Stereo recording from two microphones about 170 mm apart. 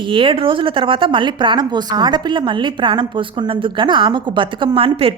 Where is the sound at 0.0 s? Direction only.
30° right (ahead or behind).